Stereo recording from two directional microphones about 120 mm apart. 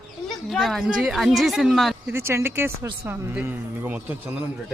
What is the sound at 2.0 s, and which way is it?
Speech, 20° right (ahead or behind).